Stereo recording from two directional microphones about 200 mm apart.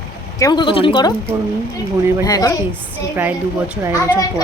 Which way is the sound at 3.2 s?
10° right (ahead or behind).